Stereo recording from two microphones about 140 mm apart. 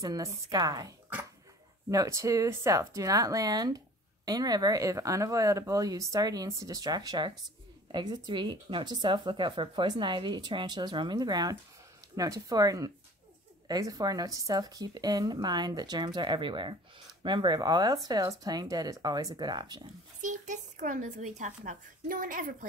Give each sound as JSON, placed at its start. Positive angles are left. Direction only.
{"t": 0.0, "sound": "speech", "side_deg": -25}
{"t": 1.9, "sound": "speech", "side_deg": -20}
{"t": 20.2, "sound": "speech", "side_deg": -60}